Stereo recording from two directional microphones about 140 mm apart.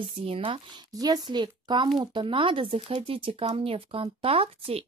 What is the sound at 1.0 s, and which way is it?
Speech, 30° right (ahead or behind).